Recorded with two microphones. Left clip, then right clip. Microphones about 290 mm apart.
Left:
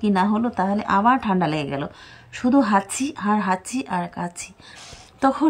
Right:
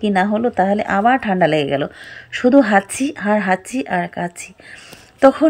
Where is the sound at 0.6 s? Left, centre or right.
Left.